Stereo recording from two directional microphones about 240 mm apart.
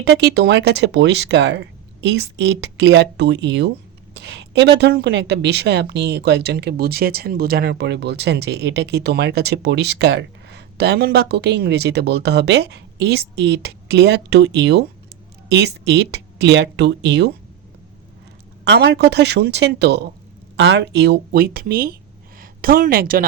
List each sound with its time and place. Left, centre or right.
0.0 s a woman's voice: right
18.6 s a woman's voice: right